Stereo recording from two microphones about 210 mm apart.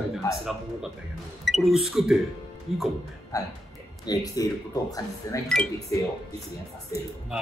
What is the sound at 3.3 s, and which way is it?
A man's voice, 15° left (ahead or behind).